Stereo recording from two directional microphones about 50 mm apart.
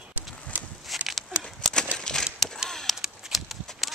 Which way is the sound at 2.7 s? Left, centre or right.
Centre.